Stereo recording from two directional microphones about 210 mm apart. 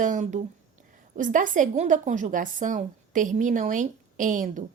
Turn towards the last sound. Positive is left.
turn(degrees=-40)  # may be behind; listen again after turning